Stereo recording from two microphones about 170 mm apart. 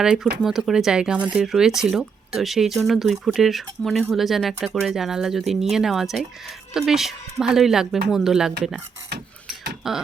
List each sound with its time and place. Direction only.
0.0 s speech: 5° right (ahead or behind)
9.8 s speech: centre (ahead or behind)